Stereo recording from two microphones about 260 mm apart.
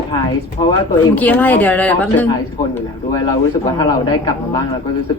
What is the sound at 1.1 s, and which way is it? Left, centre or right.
Speech, centre.